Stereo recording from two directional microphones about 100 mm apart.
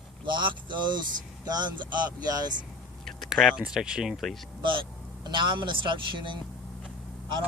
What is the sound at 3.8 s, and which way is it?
Speech, 5° right (ahead or behind).